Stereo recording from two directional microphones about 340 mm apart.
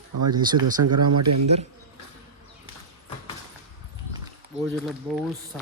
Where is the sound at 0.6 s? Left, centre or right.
Right.